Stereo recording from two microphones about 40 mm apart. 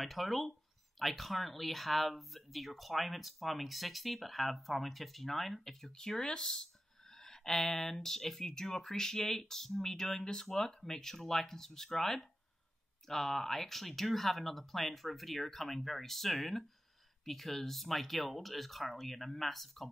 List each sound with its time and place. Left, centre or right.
0.0 s speech: centre
5.9 s speech: centre